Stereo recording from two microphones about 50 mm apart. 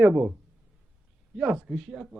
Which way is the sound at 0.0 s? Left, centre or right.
Right.